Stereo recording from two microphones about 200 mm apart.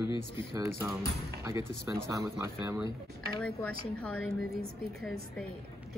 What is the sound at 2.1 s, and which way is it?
Speech, 15° right (ahead or behind).